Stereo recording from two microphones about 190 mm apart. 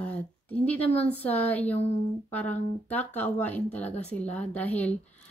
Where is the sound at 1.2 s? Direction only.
10° left (ahead or behind).